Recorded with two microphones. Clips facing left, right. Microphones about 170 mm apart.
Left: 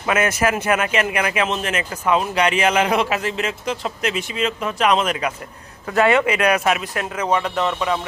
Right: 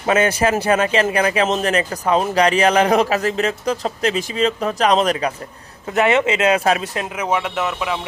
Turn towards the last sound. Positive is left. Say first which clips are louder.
# left 1 dB
turn(degrees=-5)  # may be behind; listen again after turning